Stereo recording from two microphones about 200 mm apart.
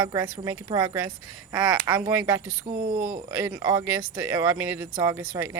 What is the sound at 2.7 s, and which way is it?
Speech, 45° right (ahead or behind).